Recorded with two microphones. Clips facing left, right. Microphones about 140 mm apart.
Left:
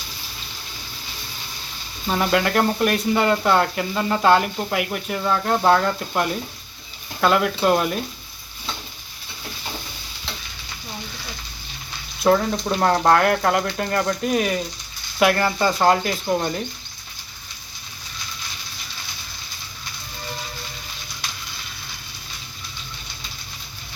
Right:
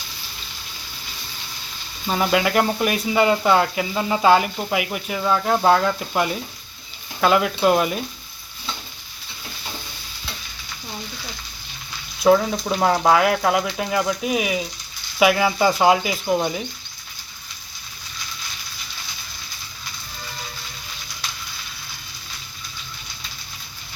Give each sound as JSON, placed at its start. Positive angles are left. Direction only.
{"t": 2.0, "sound": "speech", "side_deg": -5}
{"t": 12.2, "sound": "speech", "side_deg": 0}